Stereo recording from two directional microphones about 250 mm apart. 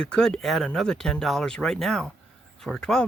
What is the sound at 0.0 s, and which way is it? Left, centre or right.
Speech, centre.